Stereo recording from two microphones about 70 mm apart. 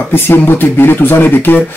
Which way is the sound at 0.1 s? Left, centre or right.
Left.